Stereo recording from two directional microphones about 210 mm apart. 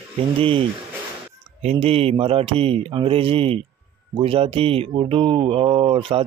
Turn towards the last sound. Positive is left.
turn(degrees=-25)  # may be behind; listen again after turning